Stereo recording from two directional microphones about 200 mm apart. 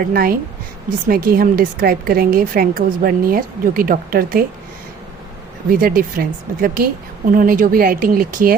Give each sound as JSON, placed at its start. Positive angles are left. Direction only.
{"t": 0.0, "sound": "a woman's voice", "side_deg": -45}
{"t": 5.7, "sound": "a woman's voice", "side_deg": -45}